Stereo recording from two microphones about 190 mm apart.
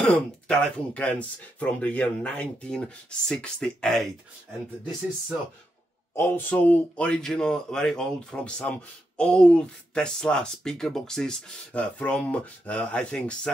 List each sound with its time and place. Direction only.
0.0 s a man's voice: 5° left (ahead or behind)
6.1 s a man's voice: 10° left (ahead or behind)